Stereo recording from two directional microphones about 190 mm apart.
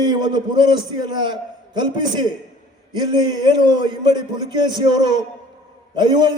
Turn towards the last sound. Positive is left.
turn(degrees=-20)  # may be behind; listen again after turning